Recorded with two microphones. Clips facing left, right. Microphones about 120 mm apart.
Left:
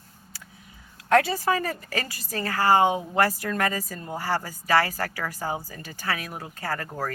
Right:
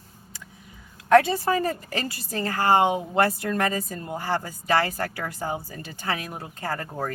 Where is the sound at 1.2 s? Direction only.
25° right (ahead or behind).